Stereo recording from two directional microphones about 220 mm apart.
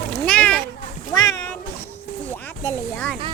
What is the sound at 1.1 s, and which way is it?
Cat, 15° left (ahead or behind).